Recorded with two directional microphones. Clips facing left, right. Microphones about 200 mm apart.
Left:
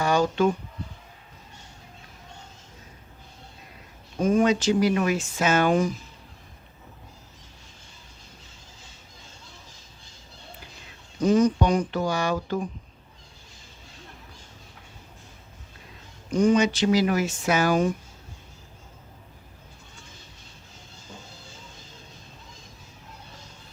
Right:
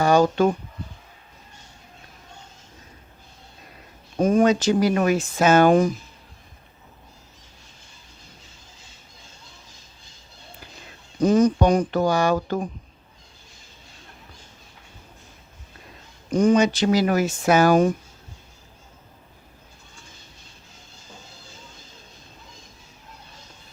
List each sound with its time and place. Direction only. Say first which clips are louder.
0.0 s speech: right 4 dB; 40° right (ahead or behind)
4.2 s speech: right 3 dB; 40° right (ahead or behind)
11.2 s speech: right 3 dB; 40° right (ahead or behind)
16.3 s speech: right 2 dB; 40° right (ahead or behind)